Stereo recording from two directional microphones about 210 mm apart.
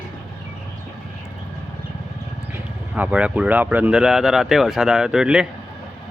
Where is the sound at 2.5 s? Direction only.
10° right (ahead or behind).